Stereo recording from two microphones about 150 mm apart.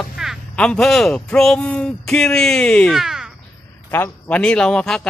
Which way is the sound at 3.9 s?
10° left (ahead or behind).